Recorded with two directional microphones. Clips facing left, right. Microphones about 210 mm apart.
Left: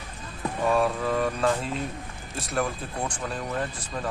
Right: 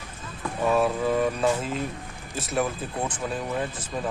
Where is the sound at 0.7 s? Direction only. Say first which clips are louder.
Right 2 dB; 5° right (ahead or behind).